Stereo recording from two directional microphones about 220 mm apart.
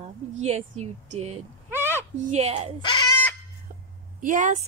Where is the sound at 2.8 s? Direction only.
20° left (ahead or behind).